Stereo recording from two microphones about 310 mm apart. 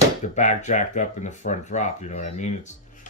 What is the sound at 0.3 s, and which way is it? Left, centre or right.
Speech, left.